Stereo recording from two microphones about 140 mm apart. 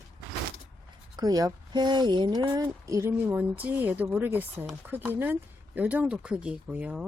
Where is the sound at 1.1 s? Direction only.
30° right (ahead or behind).